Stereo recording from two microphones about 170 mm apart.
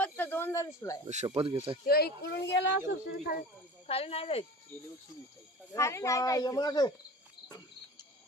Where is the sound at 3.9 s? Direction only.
35° left (ahead or behind).